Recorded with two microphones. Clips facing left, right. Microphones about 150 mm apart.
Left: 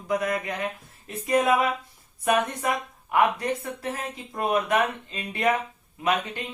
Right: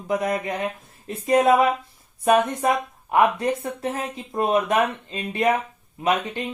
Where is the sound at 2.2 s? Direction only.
35° right (ahead or behind).